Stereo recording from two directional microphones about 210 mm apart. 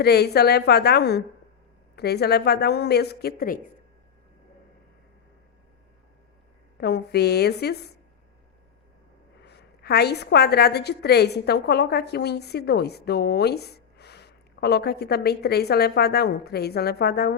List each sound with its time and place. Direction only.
0.0 s a woman's voice: 50° left (ahead or behind)
6.7 s a woman's voice: 50° left (ahead or behind)
9.4 s a woman's voice: 50° left (ahead or behind)